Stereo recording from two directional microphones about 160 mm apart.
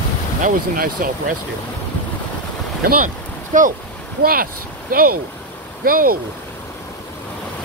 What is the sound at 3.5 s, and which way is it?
Speech, 55° right (ahead or behind).